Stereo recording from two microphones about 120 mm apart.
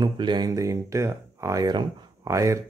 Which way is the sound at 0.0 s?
40° right (ahead or behind).